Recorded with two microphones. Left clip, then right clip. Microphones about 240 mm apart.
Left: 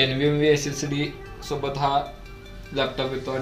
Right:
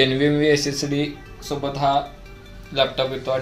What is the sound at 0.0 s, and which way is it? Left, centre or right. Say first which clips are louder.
Speech: right 3 dB; right.